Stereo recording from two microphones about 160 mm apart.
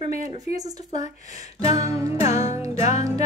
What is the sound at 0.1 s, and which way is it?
Speech, 45° left (ahead or behind).